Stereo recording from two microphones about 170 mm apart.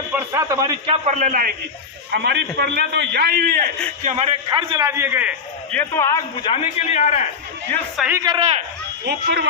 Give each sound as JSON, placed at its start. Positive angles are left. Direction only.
{"t": 0.3, "sound": "a man's voice", "side_deg": -20}
{"t": 0.9, "sound": "a man's voice", "side_deg": -45}
{"t": 2.1, "sound": "a man's voice", "side_deg": -80}
{"t": 4.0, "sound": "a man's voice", "side_deg": -40}
{"t": 4.4, "sound": "a man's voice", "side_deg": -25}
{"t": 4.9, "sound": "a man's voice", "side_deg": -15}
{"t": 5.7, "sound": "a man's voice", "side_deg": 15}
{"t": 6.4, "sound": "a man's voice", "side_deg": 35}
{"t": 7.9, "sound": "a man's voice", "side_deg": -5}
{"t": 8.2, "sound": "a man's voice", "side_deg": -25}
{"t": 9.0, "sound": "a man's voice", "side_deg": -70}